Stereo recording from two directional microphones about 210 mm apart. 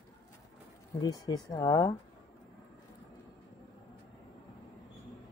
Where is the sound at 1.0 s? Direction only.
15° left (ahead or behind).